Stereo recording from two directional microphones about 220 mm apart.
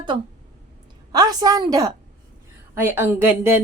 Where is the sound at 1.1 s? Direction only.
15° right (ahead or behind).